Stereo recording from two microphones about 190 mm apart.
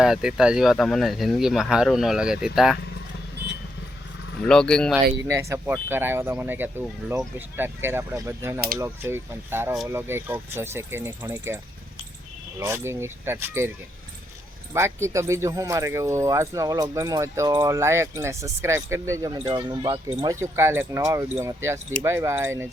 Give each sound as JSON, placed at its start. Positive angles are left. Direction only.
{"t": 0.0, "sound": "speech", "side_deg": -5}
{"t": 4.4, "sound": "speech", "side_deg": 5}
{"t": 5.3, "sound": "speech", "side_deg": -15}
{"t": 14.7, "sound": "speech", "side_deg": -15}